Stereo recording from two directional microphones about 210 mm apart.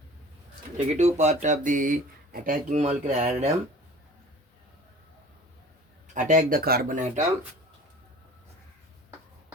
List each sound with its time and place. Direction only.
0.8 s speech: 35° right (ahead or behind)
6.1 s speech: 35° right (ahead or behind)